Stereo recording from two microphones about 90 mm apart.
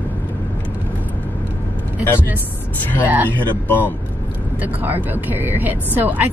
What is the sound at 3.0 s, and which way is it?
Speech, 20° right (ahead or behind).